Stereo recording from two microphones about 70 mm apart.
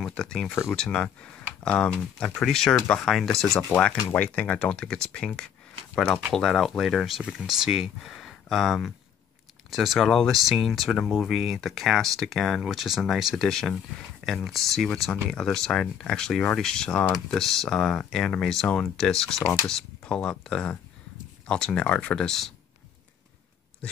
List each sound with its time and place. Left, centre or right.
0.0 s speech: centre
4.1 s speech: left
6.3 s speech: centre
8.0 s speech: centre